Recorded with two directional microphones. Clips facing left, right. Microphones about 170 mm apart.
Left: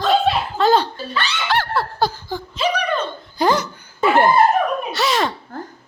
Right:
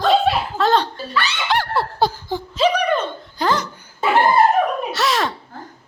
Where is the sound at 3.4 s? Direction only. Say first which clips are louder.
Left 3 dB; 10° left (ahead or behind).